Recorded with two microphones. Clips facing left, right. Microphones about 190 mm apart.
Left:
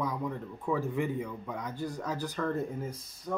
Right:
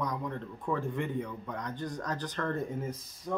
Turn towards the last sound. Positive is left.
turn(degrees=0)  # may be behind; listen again after turning